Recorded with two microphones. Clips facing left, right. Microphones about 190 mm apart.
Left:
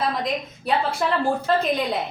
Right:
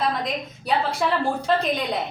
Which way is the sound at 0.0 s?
Centre (ahead or behind).